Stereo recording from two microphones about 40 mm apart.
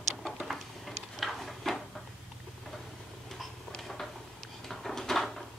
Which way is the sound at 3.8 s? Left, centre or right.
Centre.